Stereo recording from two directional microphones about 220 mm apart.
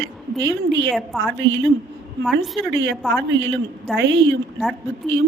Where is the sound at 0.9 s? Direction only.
Centre (ahead or behind).